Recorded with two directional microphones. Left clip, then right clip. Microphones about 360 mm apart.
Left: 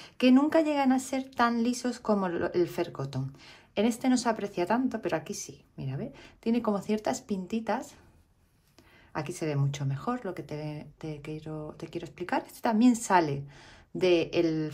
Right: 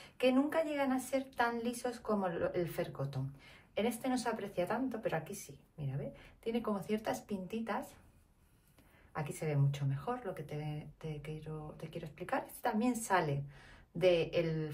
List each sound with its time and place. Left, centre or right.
0.0 s a woman's voice: centre
9.1 s speech: centre